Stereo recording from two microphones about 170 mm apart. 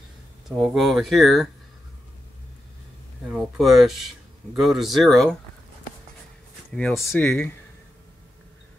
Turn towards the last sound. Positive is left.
turn(degrees=10)  # may be behind; listen again after turning